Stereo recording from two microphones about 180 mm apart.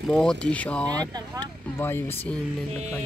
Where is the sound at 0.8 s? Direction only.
20° right (ahead or behind).